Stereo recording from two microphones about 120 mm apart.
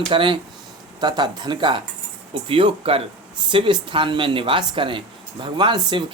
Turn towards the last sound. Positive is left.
turn(degrees=-40)  # may be behind; listen again after turning